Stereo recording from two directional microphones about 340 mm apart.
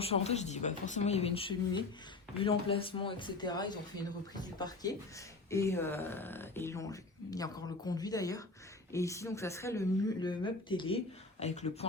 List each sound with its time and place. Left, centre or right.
0.0 s speech: centre